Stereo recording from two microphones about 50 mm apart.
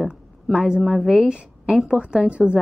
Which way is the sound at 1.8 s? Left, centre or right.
Centre.